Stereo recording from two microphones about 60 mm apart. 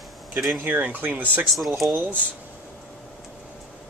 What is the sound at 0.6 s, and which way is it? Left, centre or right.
Speech, right.